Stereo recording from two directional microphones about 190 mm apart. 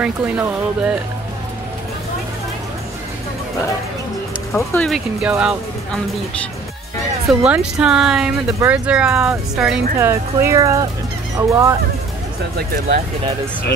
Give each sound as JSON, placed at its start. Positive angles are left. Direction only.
{"t": 0.0, "sound": "speech", "side_deg": -5}
{"t": 4.6, "sound": "speech", "side_deg": 5}
{"t": 7.2, "sound": "speech", "side_deg": -5}